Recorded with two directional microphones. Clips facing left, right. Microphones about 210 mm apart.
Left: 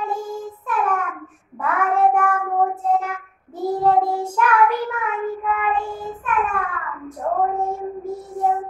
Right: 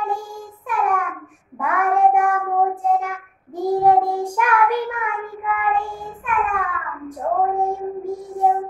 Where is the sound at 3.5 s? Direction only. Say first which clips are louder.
Right 2 dB; 15° right (ahead or behind).